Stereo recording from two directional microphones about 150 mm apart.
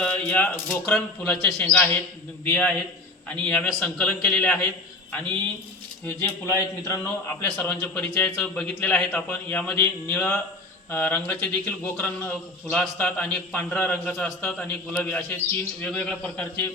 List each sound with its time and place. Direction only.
0.0 s a sound: 10° left (ahead or behind)
0.7 s a man's voice: 10° left (ahead or behind)
6.1 s a man's voice: 15° left (ahead or behind)
7.5 s a man's voice: 10° left (ahead or behind)